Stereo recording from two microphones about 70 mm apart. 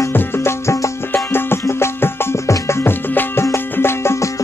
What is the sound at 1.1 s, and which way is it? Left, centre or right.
Music, left.